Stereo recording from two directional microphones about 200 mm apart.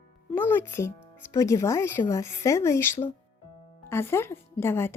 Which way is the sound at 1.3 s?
15° left (ahead or behind).